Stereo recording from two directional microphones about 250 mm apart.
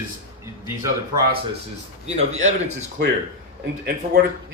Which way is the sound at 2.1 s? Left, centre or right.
Right.